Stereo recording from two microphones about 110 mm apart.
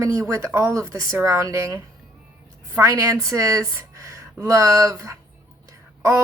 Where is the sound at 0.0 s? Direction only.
30° right (ahead or behind).